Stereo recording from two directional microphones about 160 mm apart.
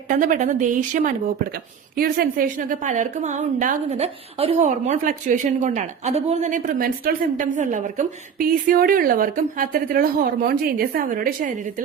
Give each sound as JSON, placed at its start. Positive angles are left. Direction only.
{"t": 0.1, "sound": "speech", "side_deg": -55}
{"t": 3.8, "sound": "a woman's voice", "side_deg": -40}